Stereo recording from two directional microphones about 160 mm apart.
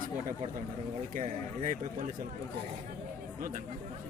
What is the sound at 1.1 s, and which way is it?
Speech, 55° right (ahead or behind).